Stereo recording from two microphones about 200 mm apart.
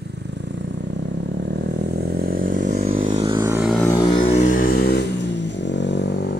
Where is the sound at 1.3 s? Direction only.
60° right (ahead or behind).